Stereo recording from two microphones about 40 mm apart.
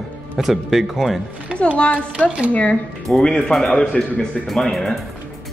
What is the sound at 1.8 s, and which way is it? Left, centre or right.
Speech, left.